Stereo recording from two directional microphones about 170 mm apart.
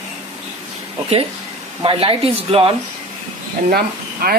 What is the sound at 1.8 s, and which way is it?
Speech, 30° right (ahead or behind).